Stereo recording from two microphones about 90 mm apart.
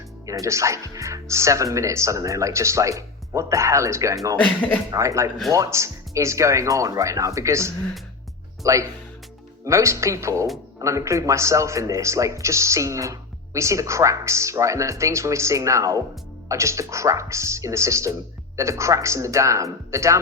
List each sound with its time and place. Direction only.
0.3 s a man's voice: 35° right (ahead or behind)
4.4 s speech: 15° left (ahead or behind)
4.9 s a man's voice: 35° right (ahead or behind)